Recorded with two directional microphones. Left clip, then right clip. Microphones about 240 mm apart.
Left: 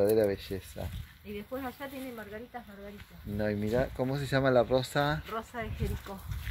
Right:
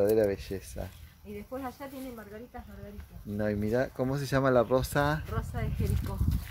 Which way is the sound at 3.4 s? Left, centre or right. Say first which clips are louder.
Right 1 dB; centre.